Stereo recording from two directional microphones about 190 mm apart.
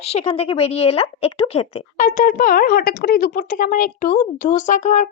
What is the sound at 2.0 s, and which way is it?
A child's voice, 45° left (ahead or behind).